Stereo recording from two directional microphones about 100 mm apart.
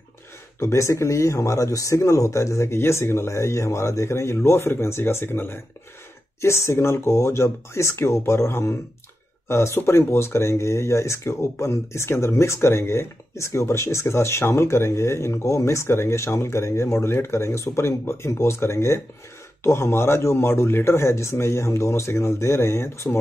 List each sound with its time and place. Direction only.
0.6 s speech: 30° left (ahead or behind)